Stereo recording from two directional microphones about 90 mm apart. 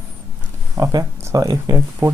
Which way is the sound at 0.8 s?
45° right (ahead or behind).